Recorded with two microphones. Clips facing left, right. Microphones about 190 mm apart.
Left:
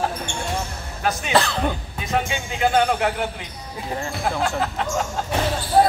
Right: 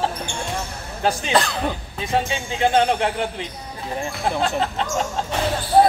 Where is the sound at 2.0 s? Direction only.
30° right (ahead or behind).